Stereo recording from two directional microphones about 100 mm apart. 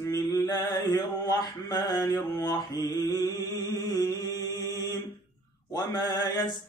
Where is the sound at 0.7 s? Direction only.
40° left (ahead or behind).